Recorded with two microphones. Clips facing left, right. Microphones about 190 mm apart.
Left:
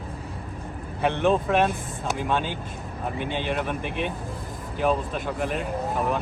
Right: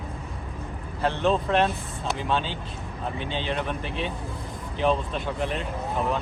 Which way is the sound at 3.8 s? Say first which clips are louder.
Left 2 dB; 55° left (ahead or behind).